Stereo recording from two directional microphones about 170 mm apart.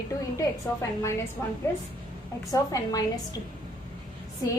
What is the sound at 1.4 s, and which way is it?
A woman's voice, 15° left (ahead or behind).